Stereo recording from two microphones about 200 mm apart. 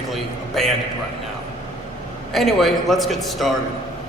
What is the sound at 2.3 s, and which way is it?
A man's voice, centre (ahead or behind).